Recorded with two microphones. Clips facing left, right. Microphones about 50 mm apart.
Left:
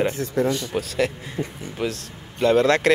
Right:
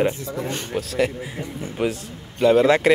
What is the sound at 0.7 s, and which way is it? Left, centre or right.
Speech, centre.